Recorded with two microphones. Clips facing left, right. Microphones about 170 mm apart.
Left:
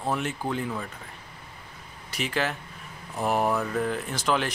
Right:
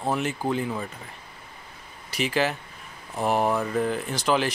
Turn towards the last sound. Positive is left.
turn(degrees=0)  # may be behind; listen again after turning